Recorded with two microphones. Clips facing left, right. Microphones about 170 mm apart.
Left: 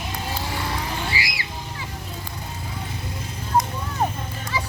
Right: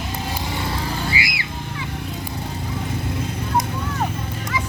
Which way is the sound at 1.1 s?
35° left (ahead or behind).